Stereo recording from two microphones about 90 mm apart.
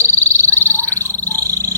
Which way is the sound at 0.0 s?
30° right (ahead or behind).